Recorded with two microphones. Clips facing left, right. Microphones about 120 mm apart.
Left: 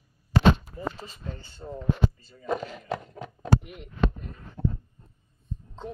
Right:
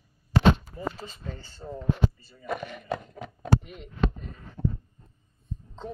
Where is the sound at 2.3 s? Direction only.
20° left (ahead or behind).